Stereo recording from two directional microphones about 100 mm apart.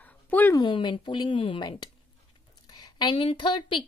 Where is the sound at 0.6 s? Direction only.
50° left (ahead or behind).